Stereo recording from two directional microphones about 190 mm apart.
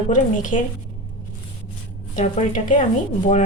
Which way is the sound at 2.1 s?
40° left (ahead or behind).